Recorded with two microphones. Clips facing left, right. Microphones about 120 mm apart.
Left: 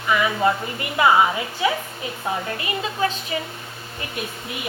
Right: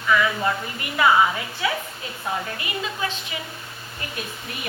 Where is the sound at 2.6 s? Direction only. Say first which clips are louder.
Left 5 dB; 35° left (ahead or behind).